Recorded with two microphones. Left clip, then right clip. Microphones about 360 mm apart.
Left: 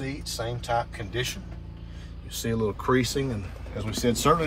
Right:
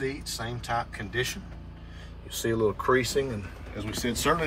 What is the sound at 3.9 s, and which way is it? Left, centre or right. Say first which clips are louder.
Speech: left 5 dB; centre.